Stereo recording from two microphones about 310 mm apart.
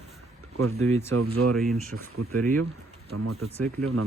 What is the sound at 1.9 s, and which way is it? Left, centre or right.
Speech, right.